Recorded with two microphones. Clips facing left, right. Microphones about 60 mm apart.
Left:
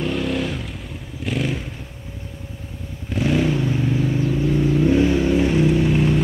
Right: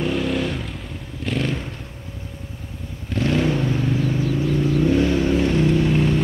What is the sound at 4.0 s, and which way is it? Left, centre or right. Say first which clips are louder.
Vehicle: left 1 dB; left.